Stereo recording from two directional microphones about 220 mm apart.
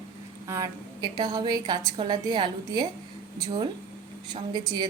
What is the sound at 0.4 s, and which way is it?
A woman's voice, 15° right (ahead or behind).